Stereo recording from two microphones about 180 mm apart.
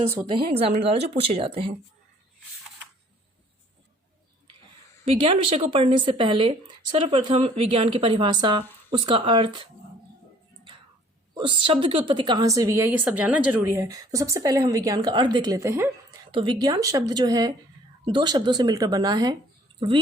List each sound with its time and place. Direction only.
0.3 s a woman's voice: 30° right (ahead or behind)
5.0 s speech: 30° right (ahead or behind)
11.3 s speech: 25° right (ahead or behind)
16.3 s speech: 25° right (ahead or behind)